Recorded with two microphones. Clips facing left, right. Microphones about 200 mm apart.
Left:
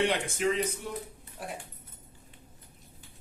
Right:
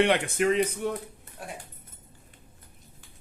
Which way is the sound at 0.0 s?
65° right (ahead or behind).